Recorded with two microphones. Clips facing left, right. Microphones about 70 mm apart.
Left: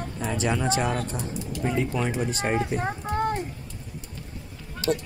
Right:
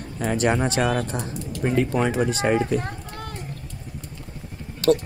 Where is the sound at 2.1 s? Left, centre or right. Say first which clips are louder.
Right 5 dB; right.